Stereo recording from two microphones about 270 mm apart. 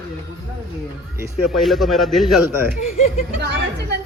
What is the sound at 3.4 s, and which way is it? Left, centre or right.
Speech, right.